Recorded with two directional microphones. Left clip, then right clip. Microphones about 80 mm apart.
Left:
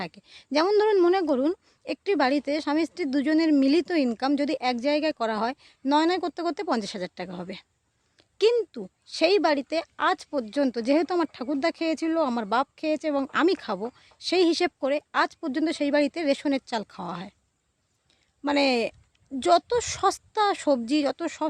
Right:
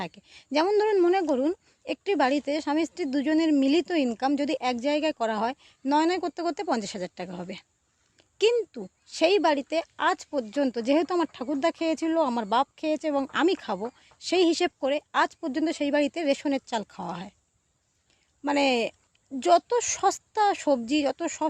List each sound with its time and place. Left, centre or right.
0.0 s speech: left
0.7 s speech: left
1.8 s speech: left
8.2 s a sound: left
8.7 s speech: left
13.2 s speech: left
15.4 s speech: left
18.4 s speech: left